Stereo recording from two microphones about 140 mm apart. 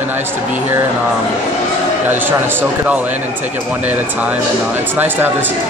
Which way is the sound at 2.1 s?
15° right (ahead or behind).